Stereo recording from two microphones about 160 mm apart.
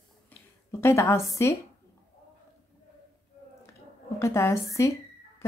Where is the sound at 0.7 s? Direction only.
15° left (ahead or behind).